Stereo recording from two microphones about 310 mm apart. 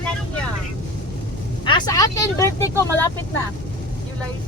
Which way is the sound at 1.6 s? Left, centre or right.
Centre.